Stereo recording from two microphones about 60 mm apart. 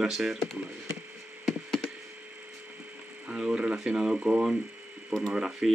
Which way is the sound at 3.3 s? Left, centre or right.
Centre.